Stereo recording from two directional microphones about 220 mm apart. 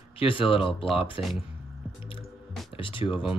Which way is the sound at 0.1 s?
25° left (ahead or behind).